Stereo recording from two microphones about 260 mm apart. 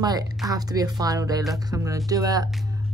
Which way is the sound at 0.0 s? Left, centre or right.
Centre.